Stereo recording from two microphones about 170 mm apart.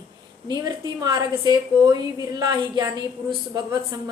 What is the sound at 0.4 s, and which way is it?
A woman's voice, 25° right (ahead or behind).